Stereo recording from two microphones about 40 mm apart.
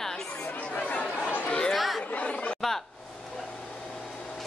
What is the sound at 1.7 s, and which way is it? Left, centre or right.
Speech, centre.